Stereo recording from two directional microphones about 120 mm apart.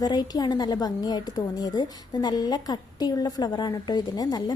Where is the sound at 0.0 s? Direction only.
35° left (ahead or behind).